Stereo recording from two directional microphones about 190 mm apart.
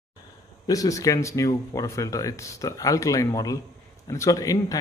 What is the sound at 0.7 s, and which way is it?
A man's voice, 20° left (ahead or behind).